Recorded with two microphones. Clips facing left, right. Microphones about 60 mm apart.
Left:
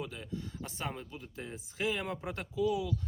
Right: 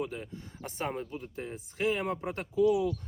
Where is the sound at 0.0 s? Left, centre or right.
Right.